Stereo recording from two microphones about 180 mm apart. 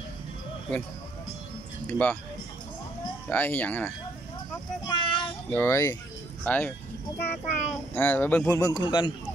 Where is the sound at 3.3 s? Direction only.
10° left (ahead or behind).